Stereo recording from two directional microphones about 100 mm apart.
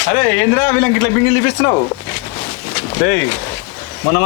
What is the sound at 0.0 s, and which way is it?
A man's voice, 25° left (ahead or behind).